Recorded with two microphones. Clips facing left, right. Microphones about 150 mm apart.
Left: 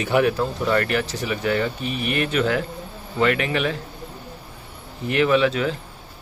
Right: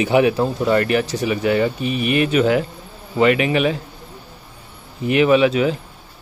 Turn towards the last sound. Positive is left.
turn(degrees=-15)  # may be behind; listen again after turning